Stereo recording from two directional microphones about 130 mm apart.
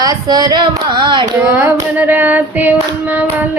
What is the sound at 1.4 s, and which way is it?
Child singing, 10° right (ahead or behind).